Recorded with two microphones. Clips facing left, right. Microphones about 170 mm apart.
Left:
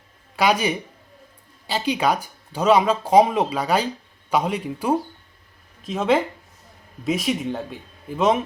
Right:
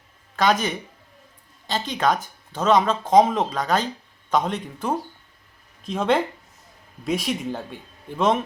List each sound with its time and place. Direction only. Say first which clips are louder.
0.3 s speech: left 1 dB; 10° left (ahead or behind)